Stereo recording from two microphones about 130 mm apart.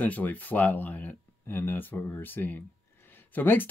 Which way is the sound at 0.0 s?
10° left (ahead or behind).